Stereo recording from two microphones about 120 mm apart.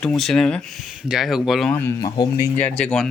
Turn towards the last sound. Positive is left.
turn(degrees=5)  # may be behind; listen again after turning